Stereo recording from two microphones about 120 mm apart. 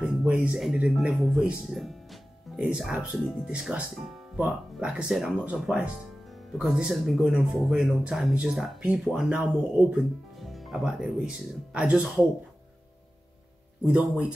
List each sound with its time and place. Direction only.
0.0 s speech: 10° right (ahead or behind)
13.8 s speech: 10° right (ahead or behind)